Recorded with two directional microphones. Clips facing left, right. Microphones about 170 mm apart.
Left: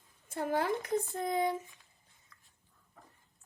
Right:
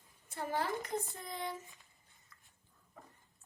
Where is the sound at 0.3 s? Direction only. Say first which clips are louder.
Left 5 dB; 55° left (ahead or behind).